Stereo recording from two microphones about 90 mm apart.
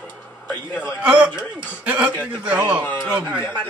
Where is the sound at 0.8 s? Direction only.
10° right (ahead or behind).